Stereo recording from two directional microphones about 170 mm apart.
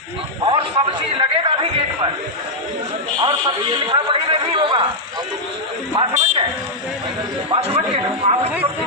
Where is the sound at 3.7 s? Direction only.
25° right (ahead or behind).